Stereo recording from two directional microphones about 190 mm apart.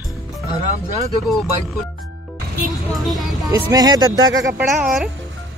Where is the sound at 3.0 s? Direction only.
Centre (ahead or behind).